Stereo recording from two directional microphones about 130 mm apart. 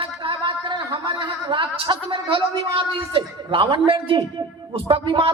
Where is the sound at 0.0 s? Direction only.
40° right (ahead or behind).